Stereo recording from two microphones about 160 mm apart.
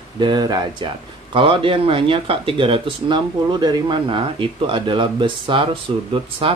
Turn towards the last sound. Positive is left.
turn(degrees=-35)  # may be behind; listen again after turning